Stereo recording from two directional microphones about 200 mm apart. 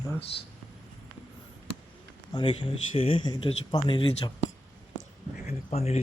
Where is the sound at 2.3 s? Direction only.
25° left (ahead or behind).